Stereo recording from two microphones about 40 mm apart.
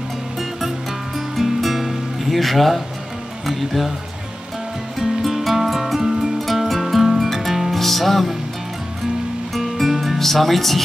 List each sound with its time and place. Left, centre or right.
1.1 s music: centre
3.4 s speech: centre
4.9 s music: centre
7.7 s music: centre
9.5 s music: centre